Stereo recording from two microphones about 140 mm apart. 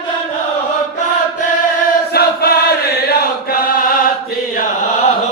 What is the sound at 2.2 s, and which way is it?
Chant, 90° left.